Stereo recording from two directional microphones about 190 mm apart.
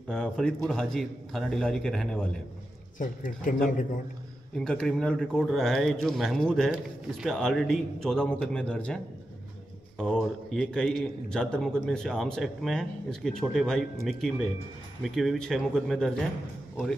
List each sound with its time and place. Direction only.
0.1 s a man's voice: 5° left (ahead or behind)
3.0 s a man's voice: 45° left (ahead or behind)
4.6 s a man's voice: 5° left (ahead or behind)
10.0 s a man's voice: centre (ahead or behind)
15.0 s a man's voice: centre (ahead or behind)